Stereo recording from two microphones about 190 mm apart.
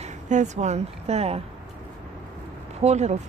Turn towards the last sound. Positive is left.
turn(degrees=-35)  # may be behind; listen again after turning